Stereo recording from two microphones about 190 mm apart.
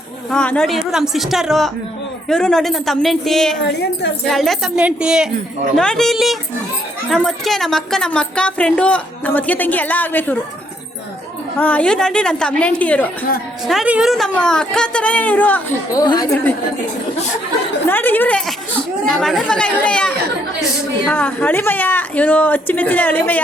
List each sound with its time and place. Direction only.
0.3 s a woman's voice: 5° left (ahead or behind)
3.6 s a woman's voice: 65° left (ahead or behind)
4.3 s a woman's voice: centre (ahead or behind)
11.5 s a woman's voice: 10° left (ahead or behind)
13.7 s a woman's voice: 5° right (ahead or behind)
16.0 s a woman's voice: 20° left (ahead or behind)
17.8 s a woman's voice: 10° left (ahead or behind)